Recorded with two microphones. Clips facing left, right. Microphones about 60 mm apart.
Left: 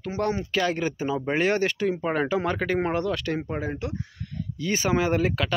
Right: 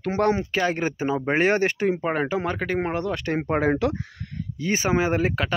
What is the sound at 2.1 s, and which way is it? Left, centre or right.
Speech, centre.